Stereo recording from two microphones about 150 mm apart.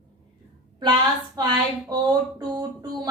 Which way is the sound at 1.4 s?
25° right (ahead or behind).